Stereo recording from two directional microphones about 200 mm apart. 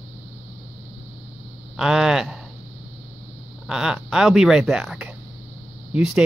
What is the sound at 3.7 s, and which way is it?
Speech, 5° right (ahead or behind).